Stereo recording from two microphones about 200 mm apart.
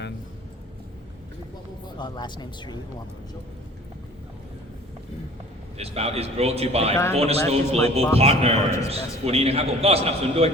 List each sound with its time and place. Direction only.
2.0 s speech: 20° left (ahead or behind)
5.7 s a man's voice: 30° right (ahead or behind)
6.9 s speech: 15° left (ahead or behind)
7.2 s a man's voice: 30° right (ahead or behind)